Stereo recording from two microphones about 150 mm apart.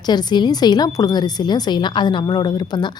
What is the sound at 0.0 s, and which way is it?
A woman's voice, 30° left (ahead or behind).